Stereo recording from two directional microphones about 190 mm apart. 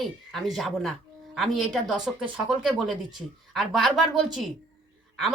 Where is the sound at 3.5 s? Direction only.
Centre (ahead or behind).